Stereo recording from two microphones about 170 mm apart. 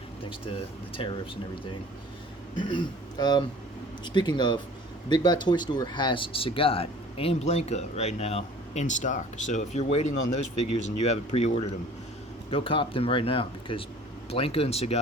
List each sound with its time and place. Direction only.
0.9 s speech: 30° left (ahead or behind)
2.6 s speech: 30° left (ahead or behind)